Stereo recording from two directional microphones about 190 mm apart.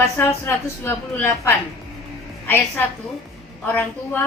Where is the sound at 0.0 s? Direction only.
15° left (ahead or behind).